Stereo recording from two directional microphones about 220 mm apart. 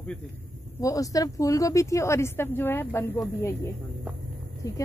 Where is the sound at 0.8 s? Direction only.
15° left (ahead or behind).